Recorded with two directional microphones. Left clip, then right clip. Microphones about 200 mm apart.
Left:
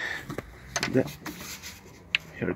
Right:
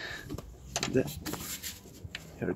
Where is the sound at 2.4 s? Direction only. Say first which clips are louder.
Left 3 dB; 20° left (ahead or behind).